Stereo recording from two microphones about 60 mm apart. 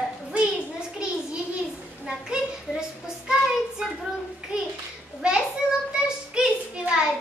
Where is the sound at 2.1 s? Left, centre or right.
Centre.